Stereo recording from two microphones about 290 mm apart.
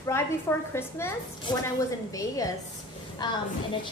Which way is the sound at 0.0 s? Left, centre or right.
Centre.